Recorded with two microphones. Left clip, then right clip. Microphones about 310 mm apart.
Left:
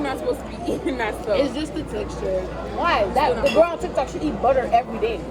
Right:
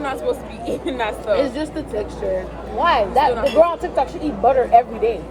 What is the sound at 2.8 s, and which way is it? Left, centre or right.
Speech, right.